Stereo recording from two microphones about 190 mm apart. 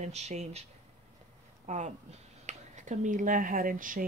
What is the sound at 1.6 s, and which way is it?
Speech, 40° right (ahead or behind).